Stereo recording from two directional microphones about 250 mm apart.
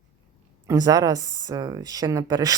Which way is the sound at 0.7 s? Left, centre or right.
Centre.